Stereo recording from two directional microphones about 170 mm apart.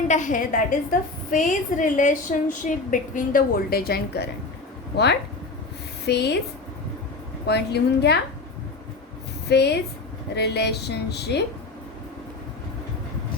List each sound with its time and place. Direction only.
0.1 s a woman's voice: 50° left (ahead or behind); by 4.3 s 70° left (ahead or behind)
6.1 s a woman's voice: 75° left (ahead or behind)
7.4 s a woman's voice: 75° left (ahead or behind)
9.5 s a woman's voice: 75° left (ahead or behind)